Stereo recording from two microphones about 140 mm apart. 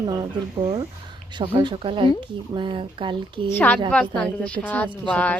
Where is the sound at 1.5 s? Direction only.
40° right (ahead or behind).